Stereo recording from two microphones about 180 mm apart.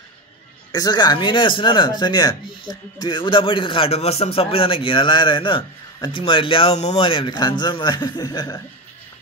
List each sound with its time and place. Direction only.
0.7 s speech: 20° left (ahead or behind)